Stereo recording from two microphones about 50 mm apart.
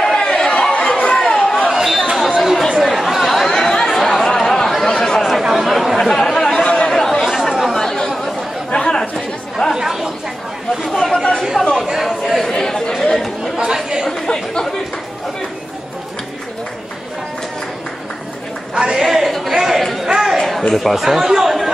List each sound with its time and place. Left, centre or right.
0.0 s chatter: centre
8.6 s chatter: left
9.8 s chatter: centre
13.6 s chatter: centre
14.1 s chatter: centre
18.8 s chatter: centre
20.1 s a sound: centre
20.7 s speech: centre